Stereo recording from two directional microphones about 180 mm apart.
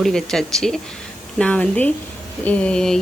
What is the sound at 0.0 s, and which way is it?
A woman's voice, centre (ahead or behind).